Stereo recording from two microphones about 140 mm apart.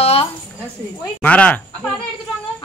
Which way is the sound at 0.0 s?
45° left (ahead or behind).